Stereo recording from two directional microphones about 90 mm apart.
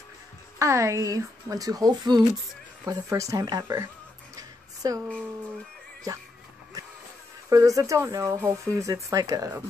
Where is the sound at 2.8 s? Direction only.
40° right (ahead or behind).